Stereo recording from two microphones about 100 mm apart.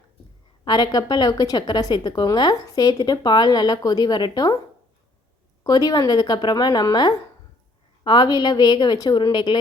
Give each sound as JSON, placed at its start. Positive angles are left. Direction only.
{"t": 0.6, "sound": "a woman's voice", "side_deg": 45}
{"t": 5.6, "sound": "a woman's voice", "side_deg": 40}